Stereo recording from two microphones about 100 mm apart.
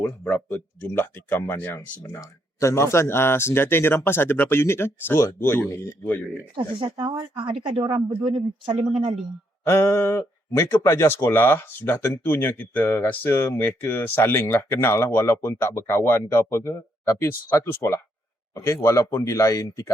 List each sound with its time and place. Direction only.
0.0 s speech: 20° left (ahead or behind)
2.0 s speech: 30° left (ahead or behind)
6.9 s speech: 50° right (ahead or behind)
7.8 s speech: 70° right (ahead or behind)
9.6 s speech: 25° left (ahead or behind)